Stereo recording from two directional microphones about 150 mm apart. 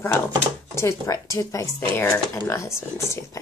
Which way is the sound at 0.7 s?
20° left (ahead or behind).